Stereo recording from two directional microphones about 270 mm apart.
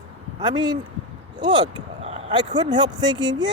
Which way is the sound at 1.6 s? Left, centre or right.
Right.